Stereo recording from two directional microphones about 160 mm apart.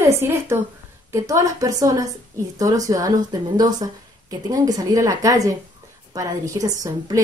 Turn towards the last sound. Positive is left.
turn(degrees=-20)  # may be behind; listen again after turning